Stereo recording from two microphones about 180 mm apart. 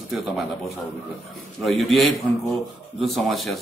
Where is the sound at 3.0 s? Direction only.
Centre (ahead or behind).